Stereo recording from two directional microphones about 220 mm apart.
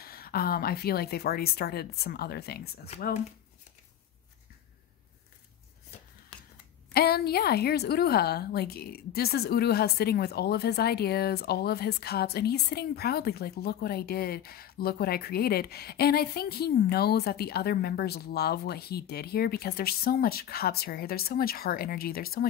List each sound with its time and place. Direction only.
0.0 s a woman's voice: 45° left (ahead or behind)
6.3 s a sound: 5° left (ahead or behind)
6.9 s a woman's voice: 45° left (ahead or behind)